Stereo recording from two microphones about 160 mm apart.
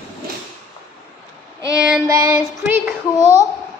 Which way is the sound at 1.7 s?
5° right (ahead or behind).